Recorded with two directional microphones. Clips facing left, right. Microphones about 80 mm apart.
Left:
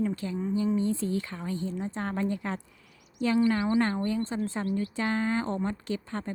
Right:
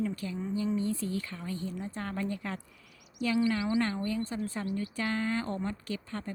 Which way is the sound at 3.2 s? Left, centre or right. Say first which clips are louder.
Left 4 dB; left.